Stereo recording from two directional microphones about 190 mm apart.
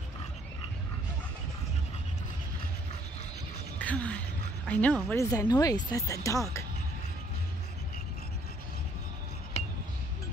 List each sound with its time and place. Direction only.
3.7 s speech: 5° left (ahead or behind)